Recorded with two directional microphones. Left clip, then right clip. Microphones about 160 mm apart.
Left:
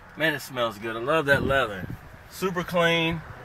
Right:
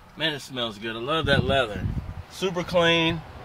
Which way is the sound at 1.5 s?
20° right (ahead or behind).